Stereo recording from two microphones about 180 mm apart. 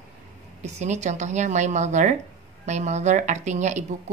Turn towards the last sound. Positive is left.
turn(degrees=-40)  # may be behind; listen again after turning